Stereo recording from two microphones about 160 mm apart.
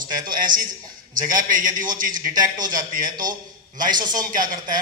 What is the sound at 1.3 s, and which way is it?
Speech, 55° right (ahead or behind).